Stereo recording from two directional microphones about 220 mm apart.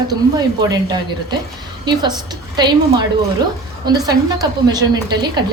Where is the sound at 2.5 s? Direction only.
20° right (ahead or behind).